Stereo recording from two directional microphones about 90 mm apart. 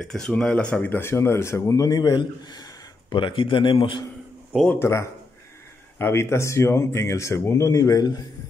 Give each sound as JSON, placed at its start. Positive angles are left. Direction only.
{"t": 0.0, "sound": "speech", "side_deg": 5}
{"t": 0.8, "sound": "a man's voice", "side_deg": 25}
{"t": 4.7, "sound": "speech", "side_deg": 30}